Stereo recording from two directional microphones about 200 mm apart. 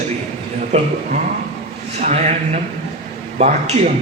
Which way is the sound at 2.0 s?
35° right (ahead or behind).